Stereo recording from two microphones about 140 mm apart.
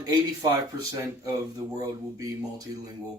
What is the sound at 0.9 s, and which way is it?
Speech, 25° right (ahead or behind).